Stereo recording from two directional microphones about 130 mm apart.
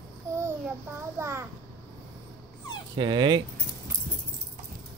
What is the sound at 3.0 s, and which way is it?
Speech, 35° right (ahead or behind).